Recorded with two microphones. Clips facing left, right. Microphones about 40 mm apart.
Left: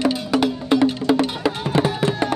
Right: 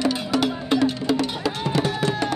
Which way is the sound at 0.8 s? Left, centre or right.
Left.